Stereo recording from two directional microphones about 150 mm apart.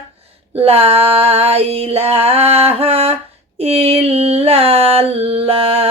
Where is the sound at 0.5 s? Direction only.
40° right (ahead or behind).